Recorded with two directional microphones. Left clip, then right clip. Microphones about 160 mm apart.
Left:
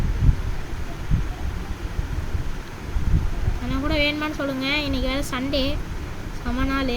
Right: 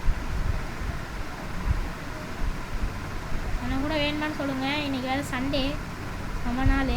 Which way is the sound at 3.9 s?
35° left (ahead or behind).